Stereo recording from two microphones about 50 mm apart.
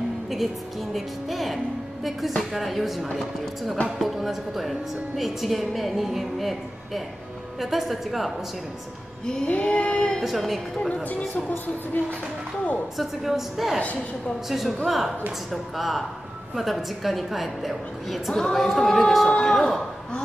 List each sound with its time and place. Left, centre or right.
0.9 s a woman's voice: centre
9.2 s music: centre
9.5 s a sound: left
10.2 s a woman's voice: centre
11.1 s a woman's voice: left
12.9 s a woman's voice: centre